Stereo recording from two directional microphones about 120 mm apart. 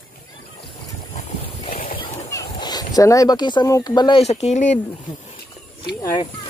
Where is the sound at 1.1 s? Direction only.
70° left (ahead or behind).